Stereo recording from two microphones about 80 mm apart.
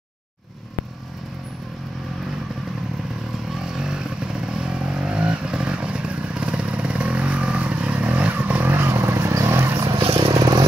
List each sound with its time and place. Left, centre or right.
3.5 s vehicle: centre; by 9.8 s right
10.3 s vehicle: right